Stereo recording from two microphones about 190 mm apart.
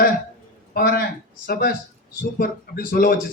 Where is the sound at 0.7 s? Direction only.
55° left (ahead or behind).